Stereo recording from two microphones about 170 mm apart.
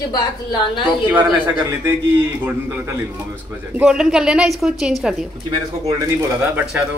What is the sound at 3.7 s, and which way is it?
A woman's voice, 5° right (ahead or behind).